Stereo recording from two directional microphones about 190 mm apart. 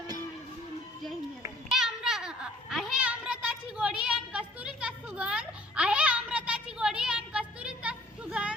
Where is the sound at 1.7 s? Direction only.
Centre (ahead or behind).